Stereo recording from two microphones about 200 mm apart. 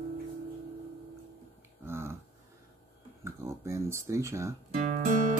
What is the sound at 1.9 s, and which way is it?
Dog, 10° right (ahead or behind).